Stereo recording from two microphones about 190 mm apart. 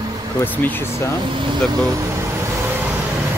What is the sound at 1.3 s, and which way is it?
Vehicle, 20° right (ahead or behind).